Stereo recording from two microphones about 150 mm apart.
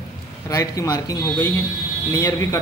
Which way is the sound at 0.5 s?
25° left (ahead or behind).